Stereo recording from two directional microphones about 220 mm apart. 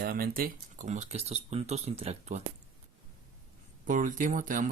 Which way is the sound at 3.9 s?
35° right (ahead or behind).